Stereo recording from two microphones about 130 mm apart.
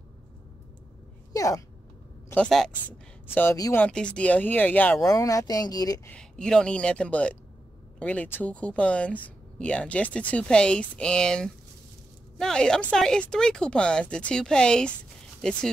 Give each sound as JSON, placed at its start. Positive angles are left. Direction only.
{"t": 1.3, "sound": "speech", "side_deg": 25}
{"t": 2.3, "sound": "speech", "side_deg": 5}
{"t": 5.0, "sound": "speech", "side_deg": 25}
{"t": 6.0, "sound": "speech", "side_deg": 5}